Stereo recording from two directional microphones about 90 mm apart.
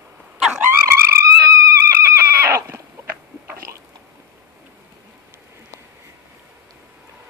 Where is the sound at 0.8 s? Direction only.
30° right (ahead or behind).